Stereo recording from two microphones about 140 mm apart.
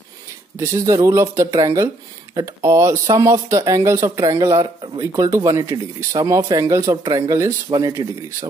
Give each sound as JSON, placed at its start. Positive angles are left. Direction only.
{"t": 0.6, "sound": "speech", "side_deg": -20}